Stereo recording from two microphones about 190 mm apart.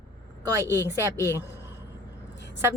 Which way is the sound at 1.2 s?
15° left (ahead or behind).